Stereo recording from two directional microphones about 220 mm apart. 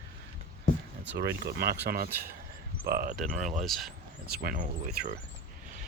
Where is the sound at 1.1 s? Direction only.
45° right (ahead or behind).